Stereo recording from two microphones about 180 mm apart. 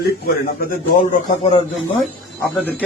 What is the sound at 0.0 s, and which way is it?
Speech, 55° left (ahead or behind).